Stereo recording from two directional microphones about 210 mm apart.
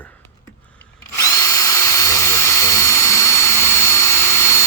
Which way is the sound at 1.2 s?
20° left (ahead or behind).